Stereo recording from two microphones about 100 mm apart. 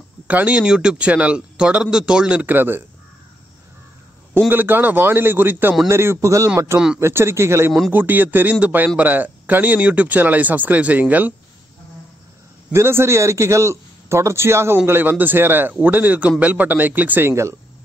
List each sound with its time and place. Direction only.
0.3 s speech: 15° right (ahead or behind)
4.3 s a man's voice: 20° right (ahead or behind)
12.7 s a man's voice: 25° right (ahead or behind)